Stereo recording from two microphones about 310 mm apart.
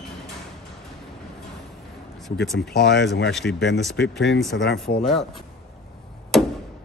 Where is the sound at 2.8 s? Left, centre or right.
Left.